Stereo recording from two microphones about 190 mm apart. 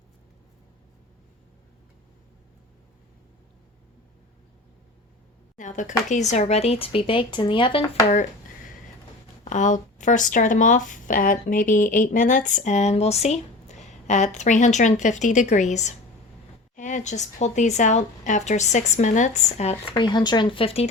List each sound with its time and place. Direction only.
5.5 s speech: 40° left (ahead or behind); by 8.0 s 25° left (ahead or behind)
9.4 s speech: 40° left (ahead or behind)
19.9 s speech: 25° left (ahead or behind)